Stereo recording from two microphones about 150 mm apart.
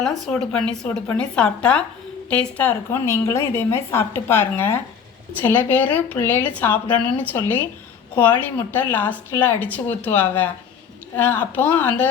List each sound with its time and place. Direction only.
0.0 s a woman's voice: 5° left (ahead or behind)